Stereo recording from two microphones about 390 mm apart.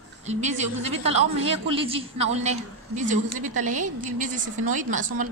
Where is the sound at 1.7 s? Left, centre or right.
Centre.